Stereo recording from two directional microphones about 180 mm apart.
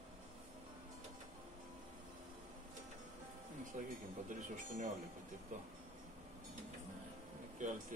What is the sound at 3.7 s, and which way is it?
Speech, 45° right (ahead or behind).